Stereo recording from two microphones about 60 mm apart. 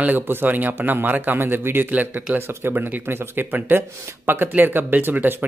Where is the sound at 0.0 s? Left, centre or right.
Right.